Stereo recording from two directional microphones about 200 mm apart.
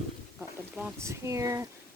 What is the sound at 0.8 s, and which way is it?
Speech, 10° right (ahead or behind).